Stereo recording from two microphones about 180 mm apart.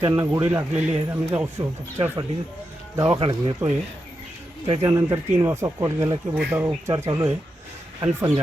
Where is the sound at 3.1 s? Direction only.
30° right (ahead or behind).